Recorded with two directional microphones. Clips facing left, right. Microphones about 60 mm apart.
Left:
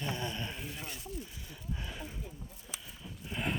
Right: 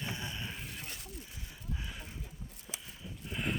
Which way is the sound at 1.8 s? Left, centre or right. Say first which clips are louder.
Left 3 dB; centre.